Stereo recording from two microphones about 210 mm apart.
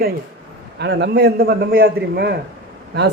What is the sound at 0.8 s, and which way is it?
A man's voice, 55° right (ahead or behind).